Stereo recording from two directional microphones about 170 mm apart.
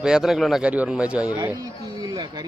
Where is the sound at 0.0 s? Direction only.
5° right (ahead or behind).